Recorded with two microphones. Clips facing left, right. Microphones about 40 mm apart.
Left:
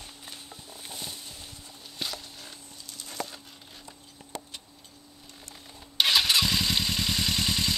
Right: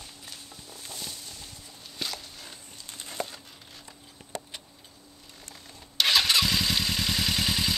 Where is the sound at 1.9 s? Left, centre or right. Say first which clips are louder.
Even; centre.